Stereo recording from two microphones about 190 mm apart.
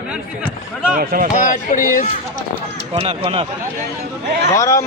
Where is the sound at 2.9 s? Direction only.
30° right (ahead or behind).